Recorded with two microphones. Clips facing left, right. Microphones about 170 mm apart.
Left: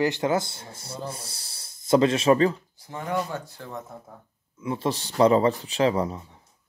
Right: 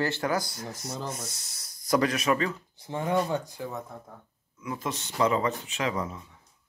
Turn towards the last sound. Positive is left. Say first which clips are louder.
# left 7 dB
turn(degrees=35)  # may be behind; listen again after turning